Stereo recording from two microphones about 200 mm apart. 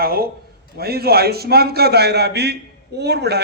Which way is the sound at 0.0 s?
50° right (ahead or behind).